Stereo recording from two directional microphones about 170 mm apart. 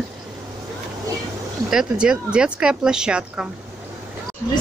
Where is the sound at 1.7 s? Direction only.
5° right (ahead or behind).